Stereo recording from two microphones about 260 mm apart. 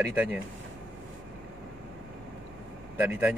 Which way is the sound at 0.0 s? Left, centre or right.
Centre.